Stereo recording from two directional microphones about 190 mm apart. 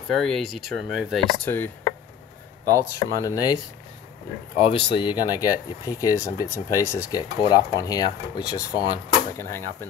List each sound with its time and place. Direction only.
0.2 s speech: centre (ahead or behind)
2.7 s speech: 15° left (ahead or behind)
4.6 s speech: 25° left (ahead or behind)